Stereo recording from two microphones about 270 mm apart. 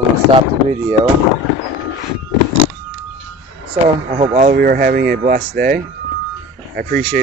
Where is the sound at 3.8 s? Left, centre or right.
Right.